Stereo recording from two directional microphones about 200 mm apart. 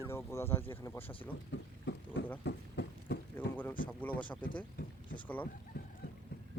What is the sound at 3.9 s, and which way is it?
Speech, 10° left (ahead or behind).